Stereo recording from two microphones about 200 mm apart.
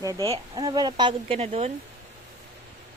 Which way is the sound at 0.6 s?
20° right (ahead or behind).